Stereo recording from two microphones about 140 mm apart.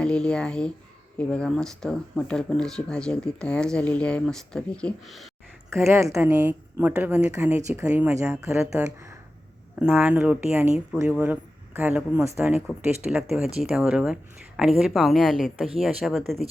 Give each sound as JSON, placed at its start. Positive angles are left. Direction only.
{"t": 0.0, "sound": "speech", "side_deg": 5}
{"t": 5.7, "sound": "speech", "side_deg": -20}